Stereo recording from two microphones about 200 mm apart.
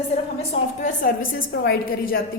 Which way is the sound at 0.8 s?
40° left (ahead or behind).